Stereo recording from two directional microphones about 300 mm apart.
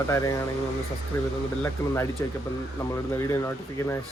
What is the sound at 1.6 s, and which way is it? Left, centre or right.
Speech, centre.